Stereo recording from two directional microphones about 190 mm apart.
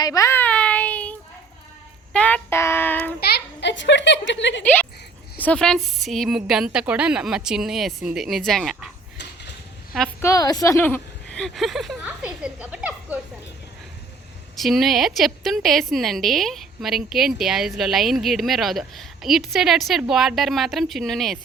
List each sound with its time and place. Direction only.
0.0 s baby cry: 15° left (ahead or behind)
2.1 s child singing: 10° left (ahead or behind)
3.2 s a child's voice: 55° left (ahead or behind)
4.6 s child singing: 10° left (ahead or behind)
5.4 s a woman's voice: 5° left (ahead or behind)
10.2 s a woman's voice: 15° left (ahead or behind); by 13.1 s 5° right (ahead or behind)
14.5 s a woman's voice: centre (ahead or behind)